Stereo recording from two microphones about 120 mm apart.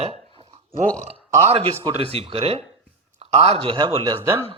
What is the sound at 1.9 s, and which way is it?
A man's voice, 55° right (ahead or behind).